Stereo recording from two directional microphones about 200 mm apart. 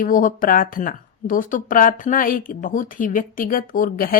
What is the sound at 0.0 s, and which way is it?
Speech, 40° left (ahead or behind).